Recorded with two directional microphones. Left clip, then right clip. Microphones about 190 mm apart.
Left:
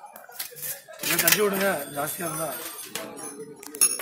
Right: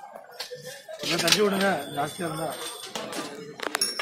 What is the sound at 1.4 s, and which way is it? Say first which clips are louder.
Speech: even; 45° left (ahead or behind).